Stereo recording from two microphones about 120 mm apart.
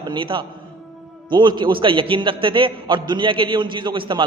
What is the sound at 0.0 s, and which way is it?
A man's voice, 40° right (ahead or behind).